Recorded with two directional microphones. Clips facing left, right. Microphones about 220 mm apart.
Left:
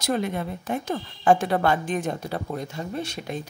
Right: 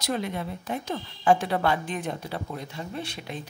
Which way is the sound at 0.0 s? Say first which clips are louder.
Left 4 dB; 50° left (ahead or behind).